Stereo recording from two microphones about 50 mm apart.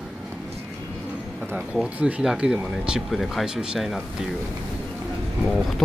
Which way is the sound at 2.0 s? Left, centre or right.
Right.